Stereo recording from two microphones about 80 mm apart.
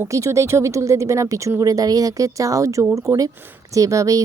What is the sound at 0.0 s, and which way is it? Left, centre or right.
Speech, right.